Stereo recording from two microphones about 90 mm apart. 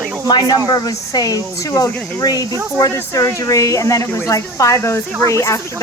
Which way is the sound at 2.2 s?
45° left (ahead or behind).